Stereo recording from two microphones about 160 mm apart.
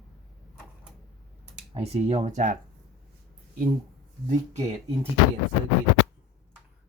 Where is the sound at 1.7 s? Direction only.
40° right (ahead or behind).